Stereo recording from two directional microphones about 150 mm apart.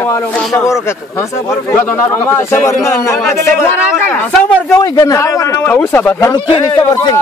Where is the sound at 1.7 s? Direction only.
15° left (ahead or behind).